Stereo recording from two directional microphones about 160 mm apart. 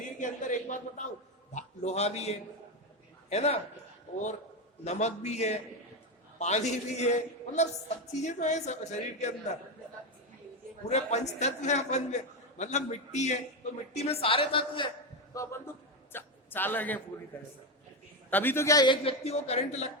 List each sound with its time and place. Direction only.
0.2 s a man's voice: 50° left (ahead or behind)
4.9 s a man's voice: 45° left (ahead or behind)
10.8 s a man's voice: 45° left (ahead or behind)
15.4 s a man's voice: 15° left (ahead or behind)
18.3 s a man's voice: 10° left (ahead or behind)
19.0 s a woman's voice: 40° left (ahead or behind)